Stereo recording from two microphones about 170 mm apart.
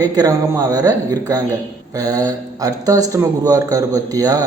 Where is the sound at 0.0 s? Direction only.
20° right (ahead or behind).